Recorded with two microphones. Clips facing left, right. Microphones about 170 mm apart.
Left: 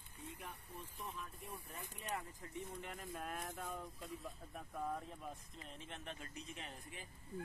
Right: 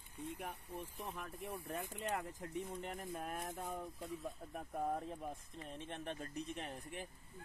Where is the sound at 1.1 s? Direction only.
75° right (ahead or behind).